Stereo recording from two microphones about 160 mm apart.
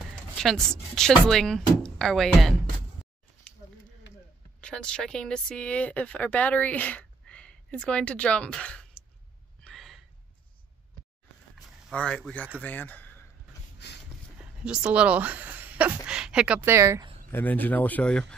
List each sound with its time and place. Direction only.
0.4 s speech: centre (ahead or behind)
4.6 s speech: 5° left (ahead or behind)
9.6 s a sound: 5° left (ahead or behind)
11.9 s speech: 5° left (ahead or behind)
13.8 s a sound: 90° left
14.4 s speech: 5° right (ahead or behind)
17.3 s speech: 10° left (ahead or behind)